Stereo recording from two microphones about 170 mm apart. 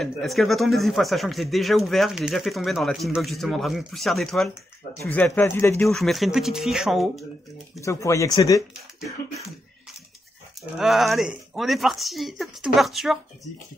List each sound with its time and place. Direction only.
0.0 s speech: centre (ahead or behind)
5.9 s speech: centre (ahead or behind)
7.8 s speech: 15° left (ahead or behind)
10.8 s speech: centre (ahead or behind)